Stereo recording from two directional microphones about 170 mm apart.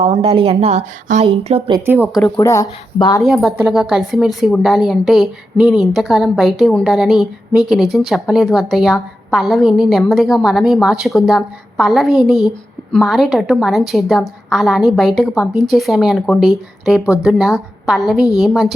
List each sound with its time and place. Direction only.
0.0 s speech: 35° right (ahead or behind)
1.8 s speech: 10° right (ahead or behind)
2.2 s speech: 15° left (ahead or behind)
3.2 s speech: centre (ahead or behind)